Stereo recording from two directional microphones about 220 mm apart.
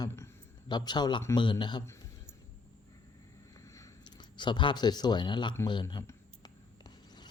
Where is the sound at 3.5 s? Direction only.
15° left (ahead or behind).